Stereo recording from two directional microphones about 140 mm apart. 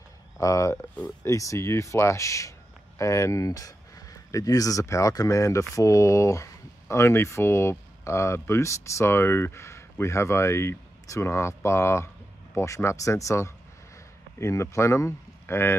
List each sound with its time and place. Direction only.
0.4 s speech: 25° left (ahead or behind)
0.9 s speech: 10° left (ahead or behind)
1.3 s speech: 25° left (ahead or behind)